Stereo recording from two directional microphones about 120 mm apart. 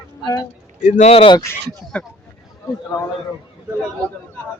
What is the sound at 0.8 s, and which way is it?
Speech, 90° left.